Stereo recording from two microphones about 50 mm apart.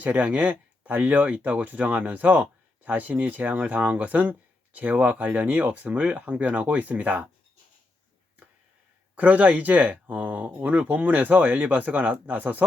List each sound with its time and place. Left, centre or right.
0.0 s speech: right
9.1 s speech: right